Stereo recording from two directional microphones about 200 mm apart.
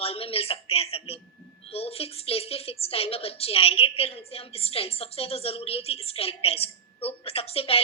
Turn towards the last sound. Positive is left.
turn(degrees=30)  # may be behind; listen again after turning